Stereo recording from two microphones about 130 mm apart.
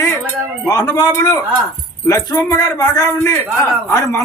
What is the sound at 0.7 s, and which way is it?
A man's voice, 30° left (ahead or behind).